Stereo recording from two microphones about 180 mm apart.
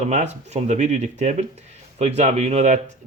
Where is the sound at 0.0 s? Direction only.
40° right (ahead or behind).